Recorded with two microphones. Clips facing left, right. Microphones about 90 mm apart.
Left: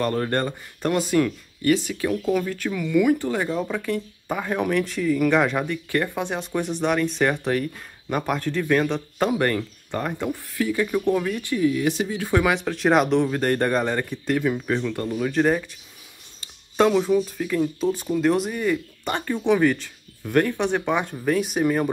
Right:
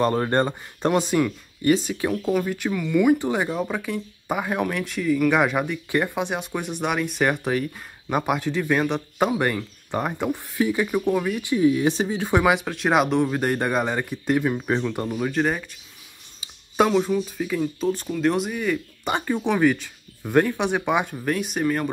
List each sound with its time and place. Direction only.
0.0 s speech: 20° right (ahead or behind)
2.7 s speech: centre (ahead or behind)
3.2 s speech: 15° right (ahead or behind)
6.4 s speech: 5° right (ahead or behind)
12.6 s speech: 5° right (ahead or behind)
15.3 s speech: centre (ahead or behind)
19.0 s speech: 15° right (ahead or behind); by 21.8 s 5° left (ahead or behind)